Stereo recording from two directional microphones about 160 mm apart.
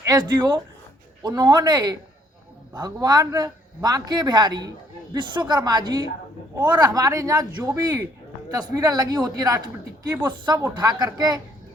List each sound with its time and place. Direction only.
0.0 s a man's voice: 25° right (ahead or behind)